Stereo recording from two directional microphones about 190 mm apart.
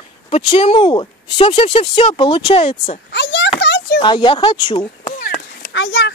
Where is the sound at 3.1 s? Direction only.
60° left (ahead or behind).